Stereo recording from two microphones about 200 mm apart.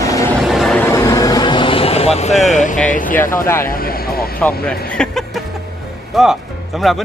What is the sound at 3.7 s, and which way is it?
Vehicle, 50° left (ahead or behind).